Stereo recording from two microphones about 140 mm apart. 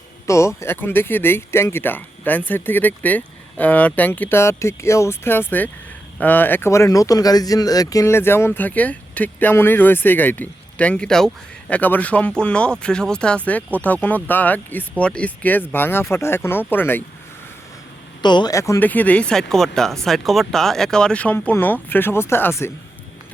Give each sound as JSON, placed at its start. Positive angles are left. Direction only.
{"t": 0.3, "sound": "speech", "side_deg": 20}
{"t": 18.2, "sound": "speech", "side_deg": 30}
{"t": 18.9, "sound": "speech", "side_deg": 10}